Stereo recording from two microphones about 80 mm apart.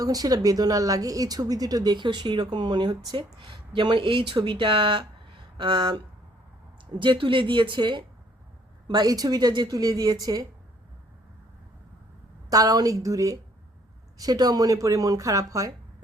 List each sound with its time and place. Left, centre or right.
0.0 s a woman's voice: right
3.2 s speech: right
7.0 s speech: right
8.9 s speech: right
9.7 s a woman's voice: right
12.5 s a woman's voice: right